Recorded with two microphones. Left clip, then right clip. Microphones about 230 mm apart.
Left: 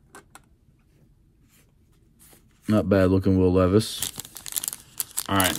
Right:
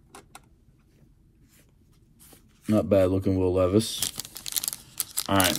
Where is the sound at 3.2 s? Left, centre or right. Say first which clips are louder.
Left 3 dB; left.